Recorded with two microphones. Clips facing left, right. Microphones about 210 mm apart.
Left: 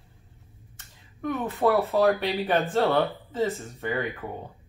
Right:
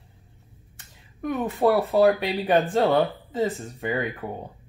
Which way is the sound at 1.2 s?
15° right (ahead or behind).